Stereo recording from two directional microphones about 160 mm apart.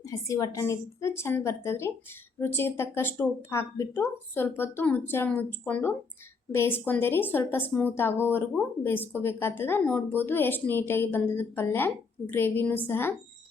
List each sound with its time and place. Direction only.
0.0 s speech: 20° left (ahead or behind)